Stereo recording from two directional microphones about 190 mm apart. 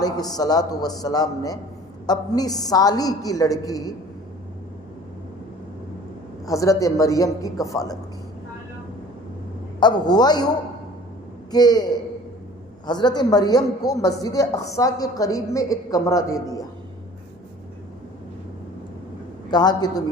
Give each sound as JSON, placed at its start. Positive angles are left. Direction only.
{"t": 0.0, "sound": "a man's voice", "side_deg": 20}
{"t": 6.4, "sound": "a man's voice", "side_deg": 15}
{"t": 9.8, "sound": "a man's voice", "side_deg": 20}
{"t": 11.5, "sound": "a man's voice", "side_deg": 20}
{"t": 19.5, "sound": "a man's voice", "side_deg": 20}